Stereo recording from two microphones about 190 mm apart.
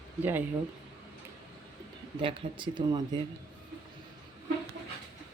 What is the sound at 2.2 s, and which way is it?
Speech, 25° right (ahead or behind).